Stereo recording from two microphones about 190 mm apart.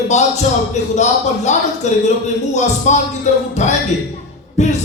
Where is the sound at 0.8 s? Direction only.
40° left (ahead or behind).